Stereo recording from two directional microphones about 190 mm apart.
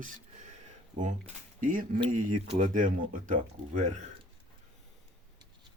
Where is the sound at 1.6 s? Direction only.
45° right (ahead or behind).